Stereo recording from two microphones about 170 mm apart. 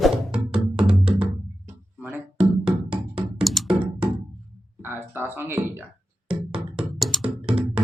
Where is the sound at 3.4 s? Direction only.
Centre (ahead or behind).